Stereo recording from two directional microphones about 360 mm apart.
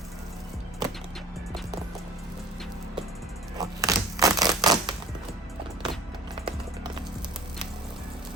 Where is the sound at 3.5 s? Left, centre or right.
Centre.